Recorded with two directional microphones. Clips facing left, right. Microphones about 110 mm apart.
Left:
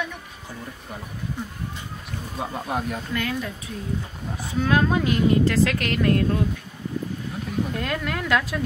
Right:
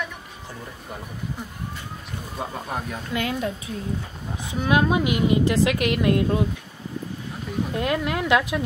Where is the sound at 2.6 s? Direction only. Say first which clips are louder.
Left 3 dB; 5° left (ahead or behind).